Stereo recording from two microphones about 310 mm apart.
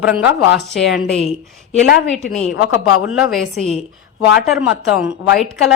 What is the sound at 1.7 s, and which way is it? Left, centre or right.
Speech, left.